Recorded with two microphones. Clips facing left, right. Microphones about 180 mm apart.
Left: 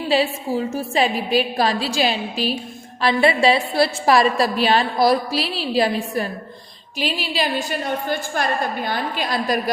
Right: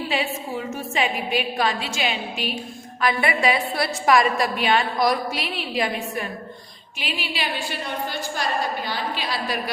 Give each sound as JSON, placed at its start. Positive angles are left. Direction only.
{"t": 0.1, "sound": "a woman's voice", "side_deg": 35}